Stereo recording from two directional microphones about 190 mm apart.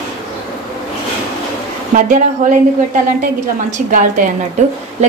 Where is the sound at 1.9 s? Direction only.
40° right (ahead or behind).